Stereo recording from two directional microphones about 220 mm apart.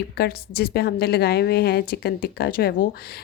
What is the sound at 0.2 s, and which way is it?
A woman's voice, 45° left (ahead or behind).